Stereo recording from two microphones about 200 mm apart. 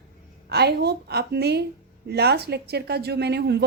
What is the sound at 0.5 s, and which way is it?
A woman's voice, 55° right (ahead or behind).